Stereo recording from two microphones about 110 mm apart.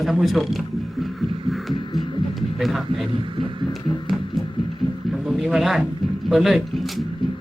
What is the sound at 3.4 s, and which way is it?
Music, 50° right (ahead or behind).